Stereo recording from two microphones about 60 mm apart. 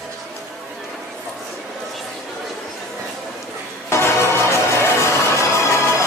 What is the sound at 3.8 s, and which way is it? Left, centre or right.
Music, left.